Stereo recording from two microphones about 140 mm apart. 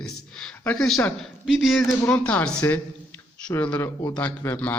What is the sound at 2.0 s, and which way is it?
Speech, 10° left (ahead or behind).